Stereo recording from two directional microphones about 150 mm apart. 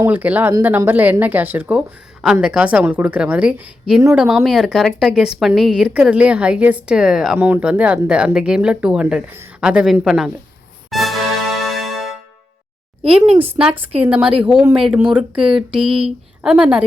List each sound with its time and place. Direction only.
0.0 s a woman's voice: 10° right (ahead or behind)
10.9 s music: centre (ahead or behind)
13.1 s speech: 45° right (ahead or behind)
13.4 s a woman's voice: 10° right (ahead or behind)
15.9 s speech: 40° right (ahead or behind)
16.4 s speech: 5° right (ahead or behind)